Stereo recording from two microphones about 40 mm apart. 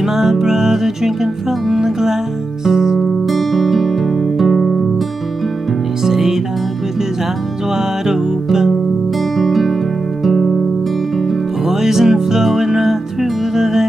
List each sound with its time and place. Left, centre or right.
0.0 s music: centre
3.3 s guitar: centre
6.0 s music: centre
7.7 s music: centre
9.4 s music: centre